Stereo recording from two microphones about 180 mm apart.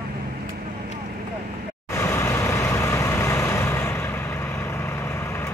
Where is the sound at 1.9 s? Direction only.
15° left (ahead or behind).